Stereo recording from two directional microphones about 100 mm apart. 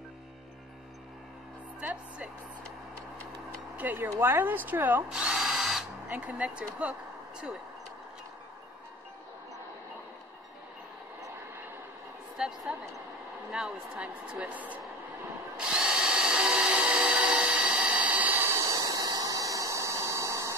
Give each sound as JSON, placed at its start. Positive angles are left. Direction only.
{"t": 1.8, "sound": "speech", "side_deg": -15}
{"t": 3.7, "sound": "speech", "side_deg": -20}
{"t": 5.1, "sound": "drill", "side_deg": -5}
{"t": 6.0, "sound": "speech", "side_deg": -15}
{"t": 12.4, "sound": "a sound", "side_deg": -5}
{"t": 13.5, "sound": "speech", "side_deg": -10}
{"t": 15.5, "sound": "drill", "side_deg": -10}
{"t": 18.5, "sound": "a sound", "side_deg": -35}